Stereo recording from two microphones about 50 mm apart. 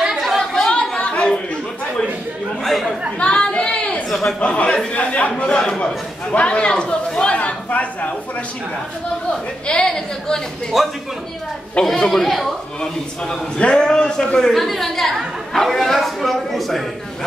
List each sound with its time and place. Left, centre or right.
0.4 s chatter: centre
0.7 s a sound: left
2.6 s chatter: centre
3.2 s a sound: left
4.1 s a sound: centre
4.4 s a man's voice: left
5.4 s a man's voice: centre
7.3 s a man's voice: left
9.7 s speech: centre
10.7 s a woman's voice: centre
11.8 s a woman's voice: centre
13.6 s speech: centre
14.5 s a woman's voice: centre